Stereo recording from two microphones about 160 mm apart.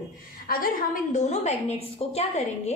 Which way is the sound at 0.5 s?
65° left (ahead or behind).